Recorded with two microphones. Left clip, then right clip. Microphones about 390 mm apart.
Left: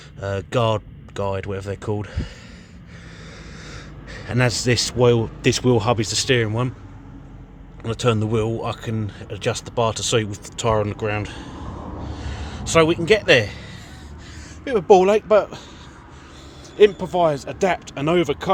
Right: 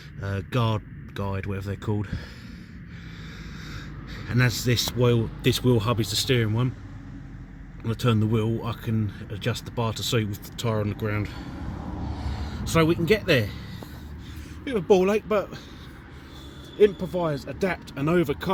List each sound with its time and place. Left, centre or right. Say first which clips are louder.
0.2 s speech: left 8 dB; centre
3.7 s a man's voice: left 4 dB; centre
7.9 s speech: left 5 dB; centre
14.6 s speech: left 7 dB; centre
16.7 s speech: left 6 dB; centre